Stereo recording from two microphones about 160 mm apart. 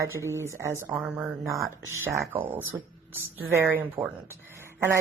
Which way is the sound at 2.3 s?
10° right (ahead or behind).